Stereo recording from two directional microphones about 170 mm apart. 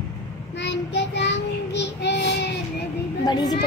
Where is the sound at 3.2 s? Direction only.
25° left (ahead or behind).